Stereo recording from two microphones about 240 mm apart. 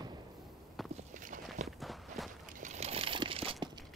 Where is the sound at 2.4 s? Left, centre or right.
Right.